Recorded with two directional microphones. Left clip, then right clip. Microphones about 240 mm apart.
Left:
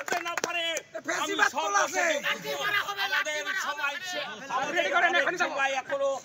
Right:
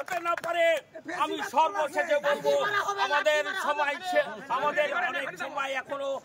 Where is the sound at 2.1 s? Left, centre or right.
Right.